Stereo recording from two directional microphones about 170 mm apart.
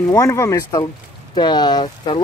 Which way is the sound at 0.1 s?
20° left (ahead or behind).